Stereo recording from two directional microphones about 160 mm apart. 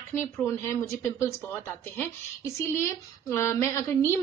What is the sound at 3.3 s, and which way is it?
Speech, 15° left (ahead or behind).